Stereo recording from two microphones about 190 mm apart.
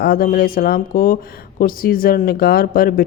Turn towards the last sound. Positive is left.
turn(degrees=50)  # may be behind; listen again after turning